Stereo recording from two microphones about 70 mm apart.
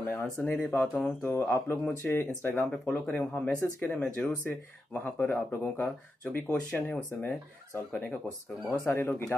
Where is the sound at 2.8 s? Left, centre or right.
Left.